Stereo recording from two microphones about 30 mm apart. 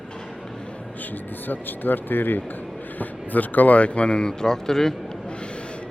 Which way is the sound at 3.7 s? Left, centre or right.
Left.